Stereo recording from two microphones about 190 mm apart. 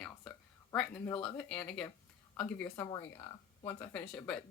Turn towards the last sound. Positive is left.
turn(degrees=5)  # may be behind; listen again after turning